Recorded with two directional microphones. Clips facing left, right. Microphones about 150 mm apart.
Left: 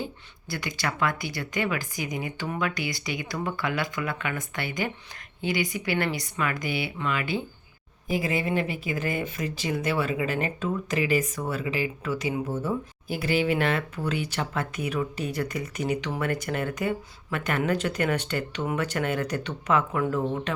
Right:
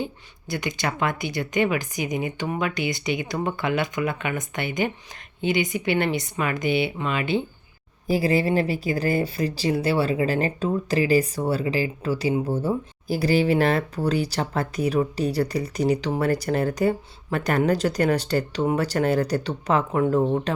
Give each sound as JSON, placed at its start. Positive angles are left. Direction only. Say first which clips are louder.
{"t": 0.0, "sound": "speech", "louder": "right 4 dB", "side_deg": -20}
{"t": 8.0, "sound": "speech", "louder": "right 6 dB", "side_deg": -35}